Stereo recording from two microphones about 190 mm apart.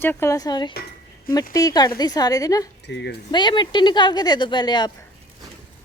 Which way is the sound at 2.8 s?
65° left (ahead or behind).